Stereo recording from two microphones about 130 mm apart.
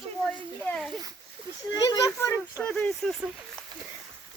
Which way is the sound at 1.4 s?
45° right (ahead or behind).